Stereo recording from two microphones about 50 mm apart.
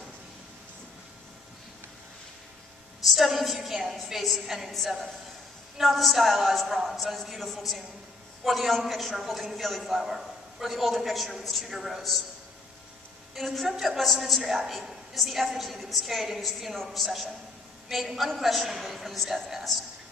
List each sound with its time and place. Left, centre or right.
3.1 s a woman's voice: centre
13.3 s a woman's voice: centre